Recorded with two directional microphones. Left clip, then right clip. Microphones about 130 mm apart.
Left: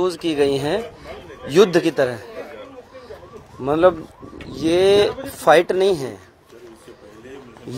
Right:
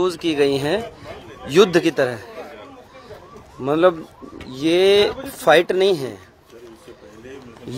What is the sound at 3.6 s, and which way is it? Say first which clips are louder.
Speech: left 1 dB; 25° right (ahead or behind).